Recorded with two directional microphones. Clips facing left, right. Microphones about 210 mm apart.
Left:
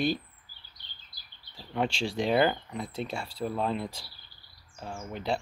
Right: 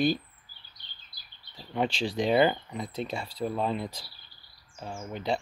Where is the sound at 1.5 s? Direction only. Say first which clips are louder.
Right 1 dB; centre (ahead or behind).